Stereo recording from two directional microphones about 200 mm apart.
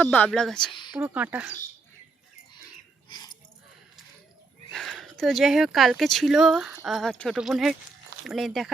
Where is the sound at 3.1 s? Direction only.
20° left (ahead or behind).